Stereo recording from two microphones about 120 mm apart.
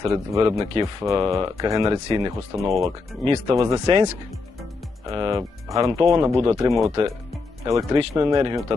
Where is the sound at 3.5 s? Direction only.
25° right (ahead or behind).